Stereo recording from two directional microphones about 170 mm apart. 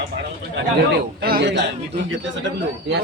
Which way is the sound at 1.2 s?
65° right (ahead or behind).